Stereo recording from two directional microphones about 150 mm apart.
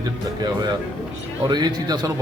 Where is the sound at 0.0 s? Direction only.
25° right (ahead or behind).